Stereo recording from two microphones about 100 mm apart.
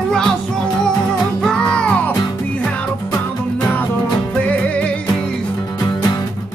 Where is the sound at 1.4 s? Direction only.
10° left (ahead or behind).